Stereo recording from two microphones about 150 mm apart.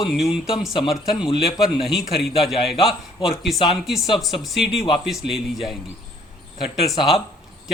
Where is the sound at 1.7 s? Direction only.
Centre (ahead or behind).